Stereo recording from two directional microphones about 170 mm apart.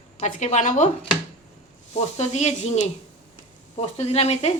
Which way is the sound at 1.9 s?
40° left (ahead or behind).